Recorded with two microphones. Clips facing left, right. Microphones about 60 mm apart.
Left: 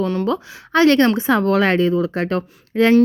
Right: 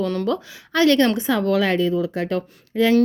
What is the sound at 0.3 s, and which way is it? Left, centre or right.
Speech, left.